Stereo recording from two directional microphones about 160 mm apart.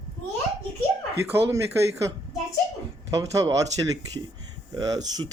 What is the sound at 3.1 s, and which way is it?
Speech, 20° right (ahead or behind).